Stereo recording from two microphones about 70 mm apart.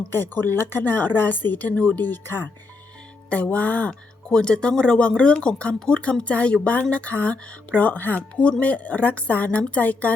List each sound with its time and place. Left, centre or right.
0.1 s speech: left
3.2 s speech: centre